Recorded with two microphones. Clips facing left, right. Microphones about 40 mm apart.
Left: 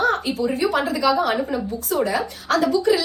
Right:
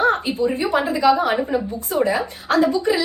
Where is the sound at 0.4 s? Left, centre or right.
Right.